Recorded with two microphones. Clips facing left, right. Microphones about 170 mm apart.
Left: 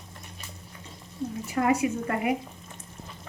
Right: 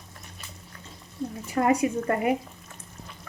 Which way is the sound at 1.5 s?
35° right (ahead or behind).